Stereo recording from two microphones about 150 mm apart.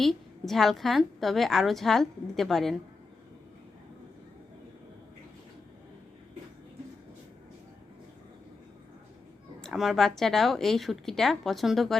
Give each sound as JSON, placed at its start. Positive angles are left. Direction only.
{"t": 0.0, "sound": "a woman's voice", "side_deg": 0}
{"t": 9.6, "sound": "a woman's voice", "side_deg": 0}